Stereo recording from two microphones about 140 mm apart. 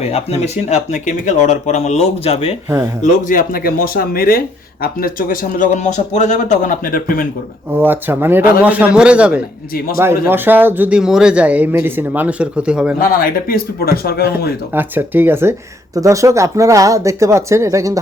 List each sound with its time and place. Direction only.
0.1 s speech: 50° left (ahead or behind)
3.0 s speech: 75° left (ahead or behind)
7.7 s speech: 15° right (ahead or behind)
9.7 s speech: 90° left
10.0 s speech: 15° right (ahead or behind)
13.0 s speech: 90° left
14.7 s speech: 15° right (ahead or behind)